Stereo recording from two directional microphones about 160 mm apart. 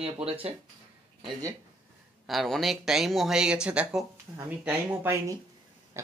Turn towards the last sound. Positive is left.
turn(degrees=-20)  # may be behind; listen again after turning